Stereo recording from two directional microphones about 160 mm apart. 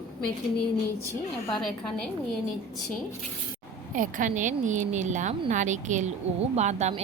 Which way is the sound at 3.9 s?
55° right (ahead or behind).